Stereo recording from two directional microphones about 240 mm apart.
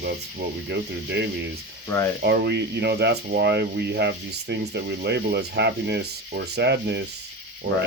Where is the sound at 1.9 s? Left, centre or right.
Centre.